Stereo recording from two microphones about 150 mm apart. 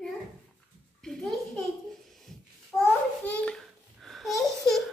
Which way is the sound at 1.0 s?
5° left (ahead or behind).